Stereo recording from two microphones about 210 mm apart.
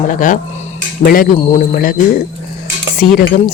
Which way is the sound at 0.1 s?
40° left (ahead or behind).